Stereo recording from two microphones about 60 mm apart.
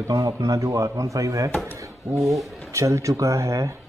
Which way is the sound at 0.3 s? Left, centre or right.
Right.